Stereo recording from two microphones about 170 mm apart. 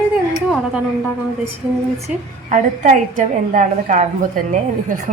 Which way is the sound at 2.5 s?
50° right (ahead or behind).